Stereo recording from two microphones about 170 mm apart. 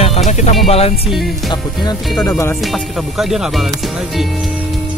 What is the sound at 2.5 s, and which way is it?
Speech, centre (ahead or behind).